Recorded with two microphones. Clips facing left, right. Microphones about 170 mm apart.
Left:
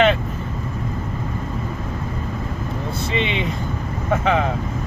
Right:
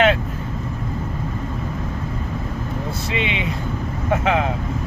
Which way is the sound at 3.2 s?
5° right (ahead or behind).